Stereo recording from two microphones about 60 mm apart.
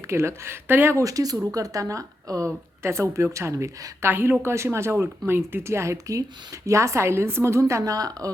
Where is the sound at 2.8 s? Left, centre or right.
Right.